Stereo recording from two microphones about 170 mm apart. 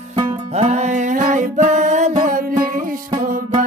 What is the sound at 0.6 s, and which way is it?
Music, 45° right (ahead or behind).